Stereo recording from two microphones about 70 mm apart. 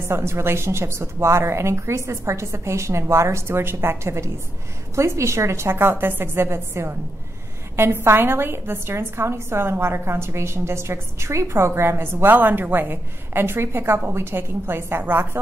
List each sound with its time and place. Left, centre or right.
0.0 s a woman's voice: right